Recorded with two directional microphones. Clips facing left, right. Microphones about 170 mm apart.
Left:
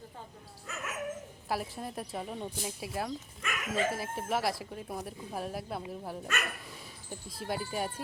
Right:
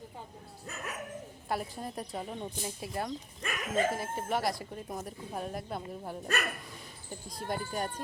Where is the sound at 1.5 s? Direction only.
Centre (ahead or behind).